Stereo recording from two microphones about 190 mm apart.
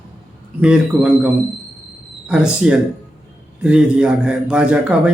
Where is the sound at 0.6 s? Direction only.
5° right (ahead or behind).